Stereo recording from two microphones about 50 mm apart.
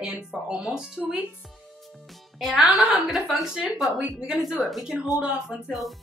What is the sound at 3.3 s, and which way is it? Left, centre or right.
Speech, centre.